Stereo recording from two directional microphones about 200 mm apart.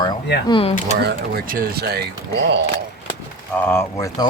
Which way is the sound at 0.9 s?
50° right (ahead or behind).